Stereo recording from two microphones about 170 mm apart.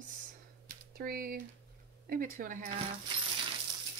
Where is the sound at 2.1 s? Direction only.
55° right (ahead or behind).